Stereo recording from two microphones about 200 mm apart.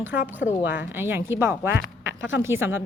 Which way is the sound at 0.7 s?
10° right (ahead or behind).